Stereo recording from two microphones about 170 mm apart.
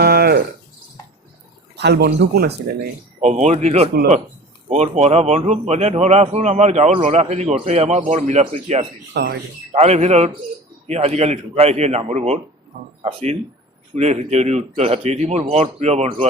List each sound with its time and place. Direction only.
0.0 s a sound: 65° right (ahead or behind)
1.7 s speech: 80° right
2.7 s speech: 40° right (ahead or behind)
9.1 s speech: 75° right (ahead or behind)
9.7 s speech: 40° right (ahead or behind)